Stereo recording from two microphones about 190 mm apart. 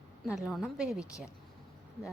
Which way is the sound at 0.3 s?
5° right (ahead or behind).